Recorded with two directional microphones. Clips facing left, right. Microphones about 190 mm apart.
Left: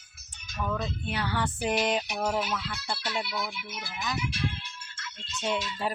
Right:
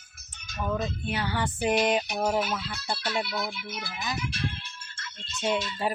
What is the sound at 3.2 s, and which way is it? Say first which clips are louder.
Speech: right 2 dB; 15° left (ahead or behind).